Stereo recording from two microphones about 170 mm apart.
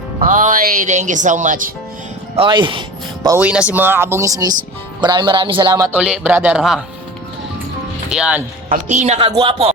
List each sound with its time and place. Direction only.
0.2 s speech: 50° right (ahead or behind)
2.3 s speech: 30° right (ahead or behind)
3.2 s speech: 10° right (ahead or behind)
6.0 s speech: 5° right (ahead or behind)
8.1 s speech: 5° right (ahead or behind)
8.7 s speech: 45° right (ahead or behind)